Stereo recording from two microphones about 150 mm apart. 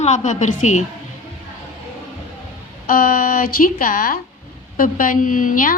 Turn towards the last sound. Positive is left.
turn(degrees=65)  # may be behind; listen again after turning